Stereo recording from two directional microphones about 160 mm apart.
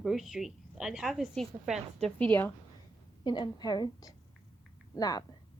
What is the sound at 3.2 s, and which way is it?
A woman's voice, 25° left (ahead or behind).